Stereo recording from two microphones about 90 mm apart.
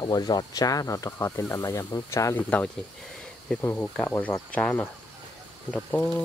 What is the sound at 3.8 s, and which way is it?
Speech, 15° left (ahead or behind).